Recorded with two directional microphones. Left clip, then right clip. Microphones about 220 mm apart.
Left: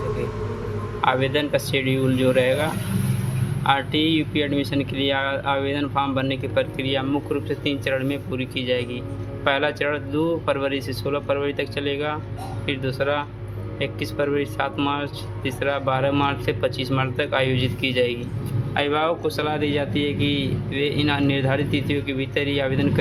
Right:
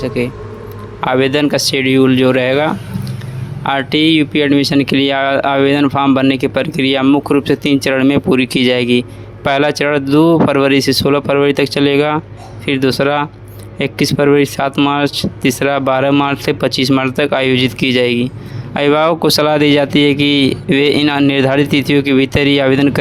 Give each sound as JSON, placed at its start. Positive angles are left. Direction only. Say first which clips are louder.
{"t": 1.0, "sound": "speech", "louder": "right 8 dB", "side_deg": -50}